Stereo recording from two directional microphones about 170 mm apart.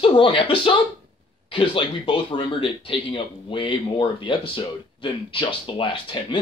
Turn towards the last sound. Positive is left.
turn(degrees=30)  # may be behind; listen again after turning